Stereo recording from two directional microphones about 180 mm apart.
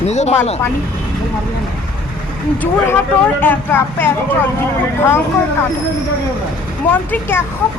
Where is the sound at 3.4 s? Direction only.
10° left (ahead or behind).